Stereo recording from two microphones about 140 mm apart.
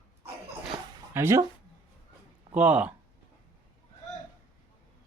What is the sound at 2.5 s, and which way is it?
Speech, 10° right (ahead or behind).